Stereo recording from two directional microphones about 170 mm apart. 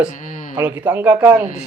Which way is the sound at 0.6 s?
10° right (ahead or behind).